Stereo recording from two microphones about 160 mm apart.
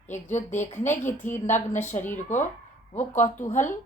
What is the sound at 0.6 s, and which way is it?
Speech, 50° left (ahead or behind).